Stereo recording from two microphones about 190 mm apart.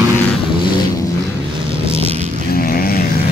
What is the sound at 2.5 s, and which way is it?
Vehicle, 50° left (ahead or behind).